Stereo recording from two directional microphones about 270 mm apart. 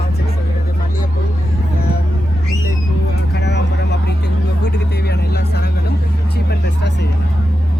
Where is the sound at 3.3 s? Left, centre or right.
Left.